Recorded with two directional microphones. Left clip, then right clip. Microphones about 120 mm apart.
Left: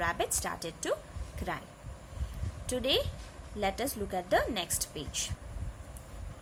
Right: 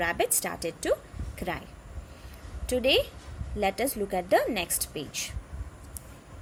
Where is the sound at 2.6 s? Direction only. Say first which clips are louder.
Right 6 dB; 35° right (ahead or behind).